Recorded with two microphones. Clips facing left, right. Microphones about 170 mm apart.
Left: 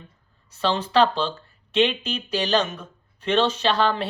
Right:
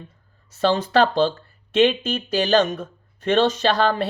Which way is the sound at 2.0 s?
50° right (ahead or behind).